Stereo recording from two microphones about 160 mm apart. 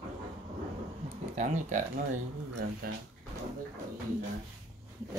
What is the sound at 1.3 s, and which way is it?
Speech, 50° right (ahead or behind).